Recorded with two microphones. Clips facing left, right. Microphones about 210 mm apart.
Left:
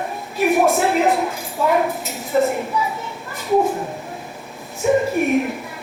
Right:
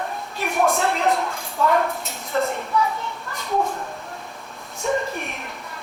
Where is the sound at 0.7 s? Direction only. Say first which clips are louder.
Left 4 dB; 5° left (ahead or behind).